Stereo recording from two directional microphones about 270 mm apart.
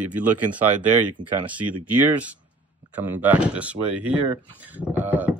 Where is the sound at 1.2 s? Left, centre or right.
Centre.